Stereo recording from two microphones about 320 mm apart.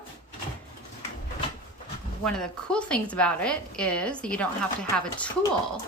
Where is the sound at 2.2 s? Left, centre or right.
Centre.